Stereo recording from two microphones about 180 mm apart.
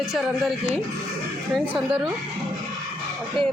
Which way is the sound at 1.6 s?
10° right (ahead or behind).